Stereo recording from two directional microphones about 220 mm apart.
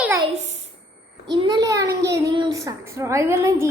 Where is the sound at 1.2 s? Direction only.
20° right (ahead or behind).